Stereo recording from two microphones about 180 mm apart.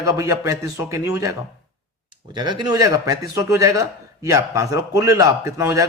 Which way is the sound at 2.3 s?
25° right (ahead or behind).